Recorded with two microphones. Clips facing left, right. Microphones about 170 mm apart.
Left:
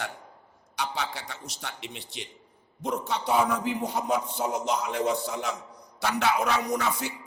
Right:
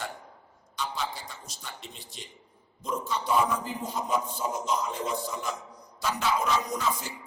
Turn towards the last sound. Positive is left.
turn(degrees=70)  # may be behind; listen again after turning